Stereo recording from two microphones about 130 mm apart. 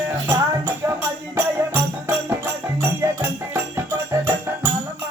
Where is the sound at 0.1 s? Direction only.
25° right (ahead or behind).